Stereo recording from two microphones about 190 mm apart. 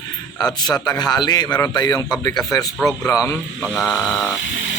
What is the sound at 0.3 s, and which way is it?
Speech, centre (ahead or behind).